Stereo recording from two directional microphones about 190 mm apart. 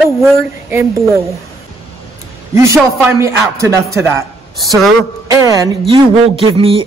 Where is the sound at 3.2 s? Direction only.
15° right (ahead or behind).